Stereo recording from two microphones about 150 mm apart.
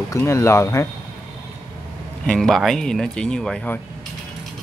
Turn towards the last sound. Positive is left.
turn(degrees=5)  # may be behind; listen again after turning